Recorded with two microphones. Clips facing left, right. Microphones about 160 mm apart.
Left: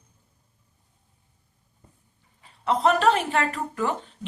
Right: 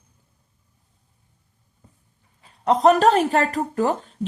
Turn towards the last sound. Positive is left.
turn(degrees=-40)  # may be behind; listen again after turning